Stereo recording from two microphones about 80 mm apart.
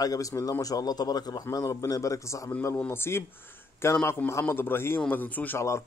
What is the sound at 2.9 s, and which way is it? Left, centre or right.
A man's voice, left.